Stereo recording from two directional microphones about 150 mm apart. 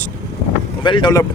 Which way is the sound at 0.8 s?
30° left (ahead or behind).